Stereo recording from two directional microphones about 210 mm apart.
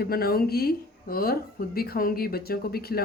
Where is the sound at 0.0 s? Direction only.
45° left (ahead or behind).